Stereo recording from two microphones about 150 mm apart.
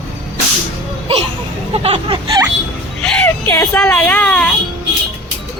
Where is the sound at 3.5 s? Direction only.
15° left (ahead or behind).